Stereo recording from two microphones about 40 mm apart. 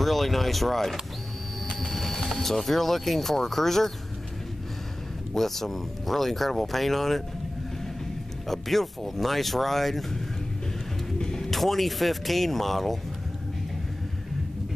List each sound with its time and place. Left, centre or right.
0.0 s speech: centre
5.3 s speech: centre
8.5 s speech: centre
11.1 s music: centre
11.5 s speech: centre